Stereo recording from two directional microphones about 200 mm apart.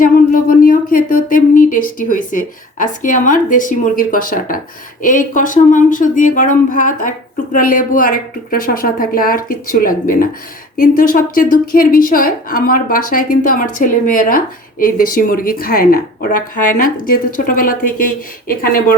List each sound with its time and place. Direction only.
0.0 s a woman's voice: 45° left (ahead or behind)